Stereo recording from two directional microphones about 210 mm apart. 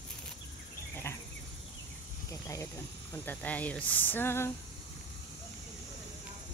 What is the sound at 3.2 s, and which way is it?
Speech, 5° left (ahead or behind).